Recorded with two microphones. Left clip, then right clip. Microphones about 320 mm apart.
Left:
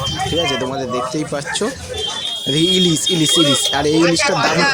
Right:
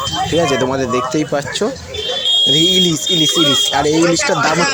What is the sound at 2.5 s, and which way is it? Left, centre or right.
Speech, left.